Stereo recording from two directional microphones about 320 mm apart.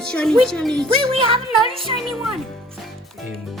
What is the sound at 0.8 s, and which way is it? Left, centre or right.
Speech, centre.